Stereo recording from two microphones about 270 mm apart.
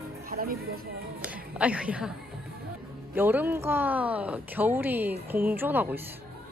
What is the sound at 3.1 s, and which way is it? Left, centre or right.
Speech, centre.